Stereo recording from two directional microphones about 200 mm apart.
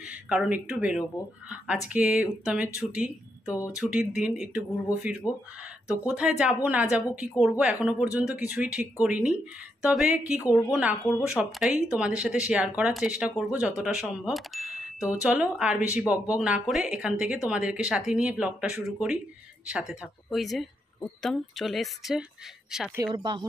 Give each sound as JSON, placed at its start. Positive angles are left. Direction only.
{"t": 0.0, "sound": "speech", "side_deg": -5}
{"t": 3.4, "sound": "speech", "side_deg": 15}
{"t": 3.7, "sound": "speech", "side_deg": 0}
{"t": 5.2, "sound": "speech", "side_deg": 15}
{"t": 5.9, "sound": "speech", "side_deg": -5}
{"t": 23.1, "sound": "speech", "side_deg": -20}